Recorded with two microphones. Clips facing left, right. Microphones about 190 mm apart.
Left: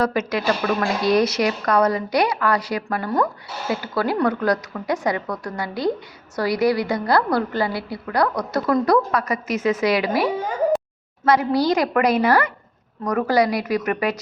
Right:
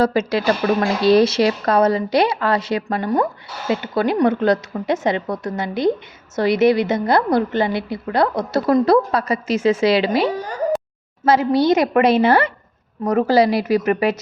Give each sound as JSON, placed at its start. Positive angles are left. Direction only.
{"t": 0.0, "sound": "a woman's voice", "side_deg": -30}